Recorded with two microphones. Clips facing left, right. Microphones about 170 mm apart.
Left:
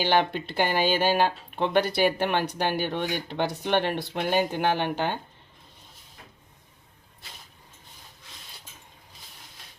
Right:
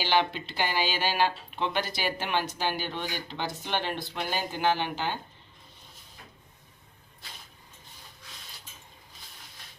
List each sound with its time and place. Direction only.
0.0 s speech: 50° left (ahead or behind)